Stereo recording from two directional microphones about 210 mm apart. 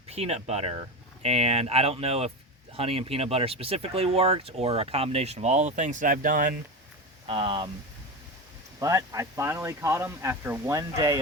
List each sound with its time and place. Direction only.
0.1 s speech: 30° right (ahead or behind)
7.3 s speech: 25° right (ahead or behind)
8.8 s speech: 15° right (ahead or behind)